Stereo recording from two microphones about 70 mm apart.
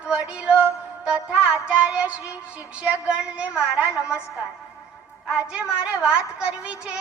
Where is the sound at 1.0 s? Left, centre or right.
Centre.